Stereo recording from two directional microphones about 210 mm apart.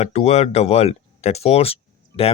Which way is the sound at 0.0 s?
30° left (ahead or behind).